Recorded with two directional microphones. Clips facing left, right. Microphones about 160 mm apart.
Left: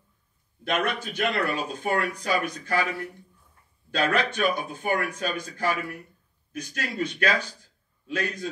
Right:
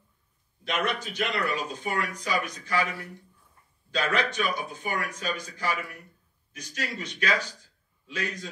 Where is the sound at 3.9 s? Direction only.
55° left (ahead or behind).